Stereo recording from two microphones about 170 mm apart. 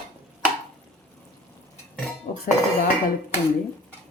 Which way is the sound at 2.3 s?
50° left (ahead or behind).